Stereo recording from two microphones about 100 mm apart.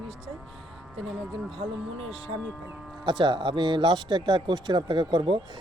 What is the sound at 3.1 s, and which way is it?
Speech, 50° right (ahead or behind).